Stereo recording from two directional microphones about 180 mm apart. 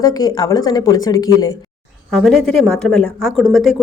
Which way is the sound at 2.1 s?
Centre (ahead or behind).